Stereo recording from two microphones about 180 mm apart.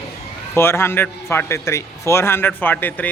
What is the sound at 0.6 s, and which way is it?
A man's voice, 15° left (ahead or behind).